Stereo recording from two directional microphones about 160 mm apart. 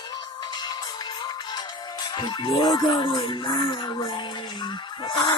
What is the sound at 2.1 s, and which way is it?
Music, 30° left (ahead or behind).